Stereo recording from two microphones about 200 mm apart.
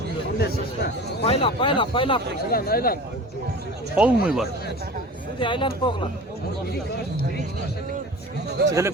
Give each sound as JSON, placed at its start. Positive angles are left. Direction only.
{"t": 0.3, "sound": "speech", "side_deg": 50}
{"t": 1.2, "sound": "speech", "side_deg": 30}
{"t": 2.5, "sound": "speech", "side_deg": 50}
{"t": 3.9, "sound": "speech", "side_deg": -5}
{"t": 5.4, "sound": "speech", "side_deg": 25}
{"t": 8.6, "sound": "speech", "side_deg": -55}